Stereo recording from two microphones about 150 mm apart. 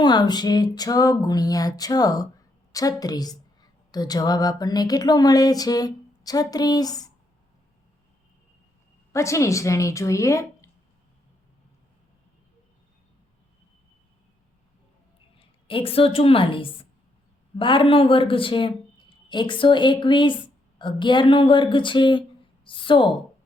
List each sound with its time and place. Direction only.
0.0 s a woman's voice: 30° left (ahead or behind)
9.1 s a woman's voice: 20° left (ahead or behind)
15.4 s a woman's voice: 35° left (ahead or behind)